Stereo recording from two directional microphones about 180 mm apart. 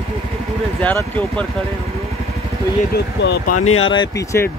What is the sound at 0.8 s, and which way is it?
Speech, 10° left (ahead or behind).